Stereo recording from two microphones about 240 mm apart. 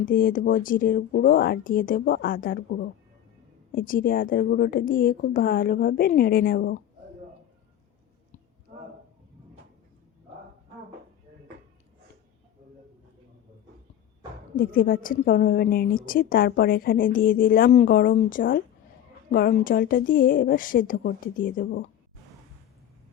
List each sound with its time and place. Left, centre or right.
0.0 s a woman's voice: left
14.5 s a woman's voice: left